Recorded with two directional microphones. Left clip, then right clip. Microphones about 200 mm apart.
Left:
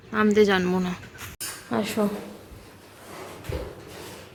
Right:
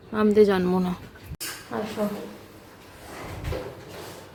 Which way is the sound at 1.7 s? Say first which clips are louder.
Left 4 dB; 30° left (ahead or behind).